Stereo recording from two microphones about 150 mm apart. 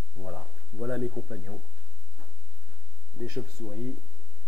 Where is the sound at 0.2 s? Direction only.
Centre (ahead or behind).